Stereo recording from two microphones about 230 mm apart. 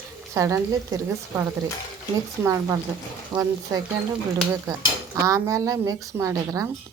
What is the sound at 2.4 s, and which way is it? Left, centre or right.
Dishes, centre.